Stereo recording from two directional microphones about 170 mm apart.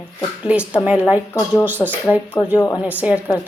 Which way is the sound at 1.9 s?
10° right (ahead or behind).